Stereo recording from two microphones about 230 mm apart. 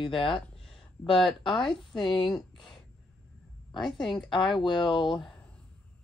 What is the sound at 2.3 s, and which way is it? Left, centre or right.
Speech, centre.